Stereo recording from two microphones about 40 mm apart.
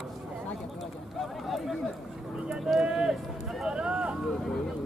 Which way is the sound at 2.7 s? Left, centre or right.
Centre.